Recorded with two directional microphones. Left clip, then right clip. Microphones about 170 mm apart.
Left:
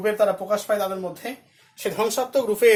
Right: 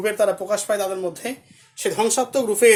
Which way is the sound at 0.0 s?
60° right (ahead or behind).